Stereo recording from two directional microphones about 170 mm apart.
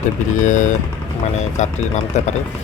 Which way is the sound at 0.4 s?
45° left (ahead or behind).